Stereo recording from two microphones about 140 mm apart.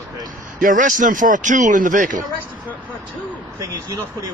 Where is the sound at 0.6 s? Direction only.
70° right (ahead or behind).